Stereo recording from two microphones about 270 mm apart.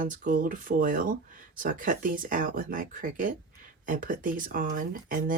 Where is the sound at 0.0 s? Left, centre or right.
Right.